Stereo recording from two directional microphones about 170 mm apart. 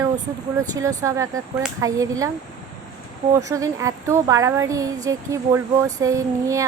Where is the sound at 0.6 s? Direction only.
20° right (ahead or behind).